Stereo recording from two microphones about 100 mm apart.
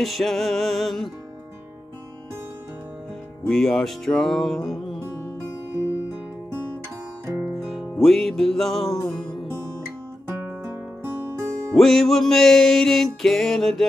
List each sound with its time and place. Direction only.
0.0 s music: centre (ahead or behind)
3.4 s music: 5° left (ahead or behind)
7.6 s music: centre (ahead or behind)
10.6 s music: 25° right (ahead or behind)
11.7 s music: centre (ahead or behind)